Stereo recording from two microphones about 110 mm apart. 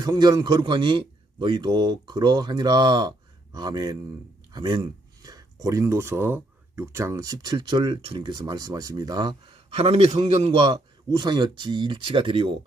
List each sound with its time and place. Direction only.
0.0 s a man's voice: 35° right (ahead or behind)
9.6 s a man's voice: 65° right (ahead or behind)
10.7 s speech: 40° right (ahead or behind)